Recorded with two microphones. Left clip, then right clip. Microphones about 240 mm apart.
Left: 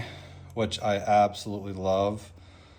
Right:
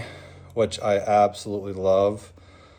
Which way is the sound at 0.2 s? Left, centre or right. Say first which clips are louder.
Right 8 dB; right.